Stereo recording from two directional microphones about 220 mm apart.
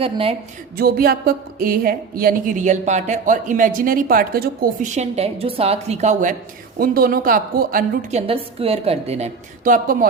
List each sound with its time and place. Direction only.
0.0 s a woman's voice: 25° right (ahead or behind)
0.8 s a woman's voice: 45° right (ahead or behind)
8.3 s a woman's voice: 25° right (ahead or behind)